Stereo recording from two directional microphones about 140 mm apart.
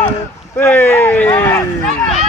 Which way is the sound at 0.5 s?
15° left (ahead or behind).